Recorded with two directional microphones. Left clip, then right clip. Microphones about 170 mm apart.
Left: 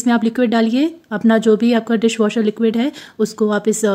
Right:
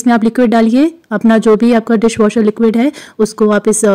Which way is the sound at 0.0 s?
35° right (ahead or behind).